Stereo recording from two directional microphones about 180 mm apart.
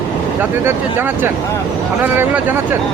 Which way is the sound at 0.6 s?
10° right (ahead or behind).